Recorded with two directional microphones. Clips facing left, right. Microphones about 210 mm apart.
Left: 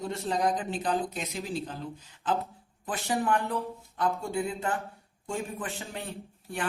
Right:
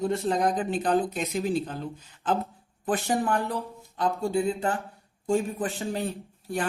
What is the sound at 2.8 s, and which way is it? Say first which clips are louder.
Speech: right 8 dB; 50° right (ahead or behind).